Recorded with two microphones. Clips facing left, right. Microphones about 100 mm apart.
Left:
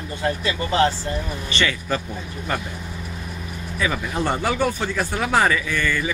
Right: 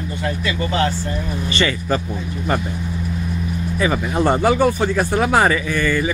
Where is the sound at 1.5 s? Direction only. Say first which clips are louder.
Right 3 dB; 10° right (ahead or behind).